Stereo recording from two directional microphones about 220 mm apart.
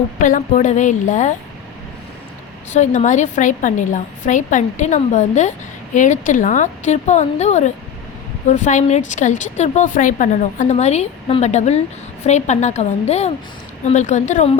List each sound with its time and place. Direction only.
0.2 s a woman's voice: 35° left (ahead or behind)
2.7 s a woman's voice: 35° left (ahead or behind)